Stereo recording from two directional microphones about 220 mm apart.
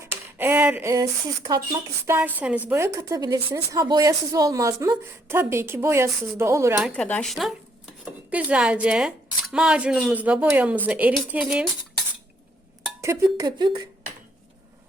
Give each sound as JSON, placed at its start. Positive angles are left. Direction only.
{"t": 0.0, "sound": "a woman's voice", "side_deg": -10}
{"t": 6.7, "sound": "a woman's voice", "side_deg": 0}
{"t": 13.0, "sound": "a woman's voice", "side_deg": -15}